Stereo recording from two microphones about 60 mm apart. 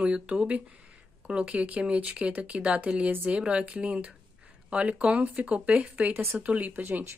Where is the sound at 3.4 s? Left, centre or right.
Centre.